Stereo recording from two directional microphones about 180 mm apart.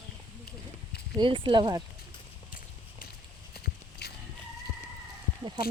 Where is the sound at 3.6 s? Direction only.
60° left (ahead or behind).